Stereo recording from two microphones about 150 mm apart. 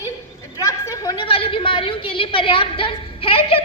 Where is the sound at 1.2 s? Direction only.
35° left (ahead or behind).